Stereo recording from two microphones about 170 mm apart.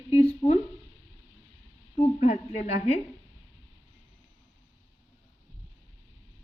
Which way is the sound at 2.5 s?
40° left (ahead or behind).